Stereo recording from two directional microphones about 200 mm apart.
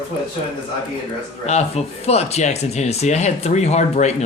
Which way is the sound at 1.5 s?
35° left (ahead or behind).